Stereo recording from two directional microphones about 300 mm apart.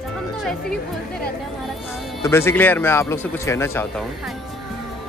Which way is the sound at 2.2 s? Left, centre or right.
Centre.